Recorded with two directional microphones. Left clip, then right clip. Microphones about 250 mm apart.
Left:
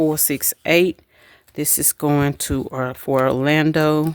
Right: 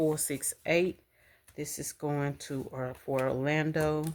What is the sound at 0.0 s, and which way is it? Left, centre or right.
Speech, left.